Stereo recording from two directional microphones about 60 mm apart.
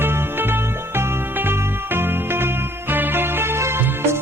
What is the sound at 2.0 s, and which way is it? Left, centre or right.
Music, right.